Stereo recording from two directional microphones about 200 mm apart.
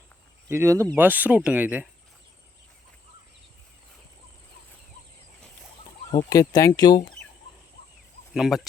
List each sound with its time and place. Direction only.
0.4 s speech: 15° right (ahead or behind)
6.1 s speech: 20° left (ahead or behind)
8.3 s speech: centre (ahead or behind)